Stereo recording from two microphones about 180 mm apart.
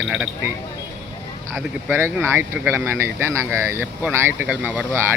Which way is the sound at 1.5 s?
10° right (ahead or behind).